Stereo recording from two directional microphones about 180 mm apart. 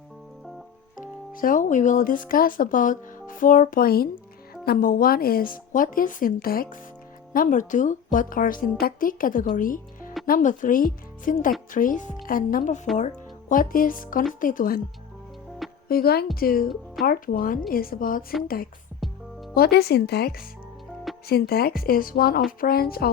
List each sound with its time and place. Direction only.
0.9 s speech: 50° left (ahead or behind)
15.9 s speech: 60° left (ahead or behind)
16.6 s speech: centre (ahead or behind)
17.1 s speech: 50° left (ahead or behind)
18.9 s music: centre (ahead or behind)
19.5 s speech: 60° left (ahead or behind)